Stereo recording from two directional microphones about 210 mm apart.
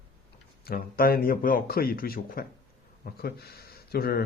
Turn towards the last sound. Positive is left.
turn(degrees=45)  # may be behind; listen again after turning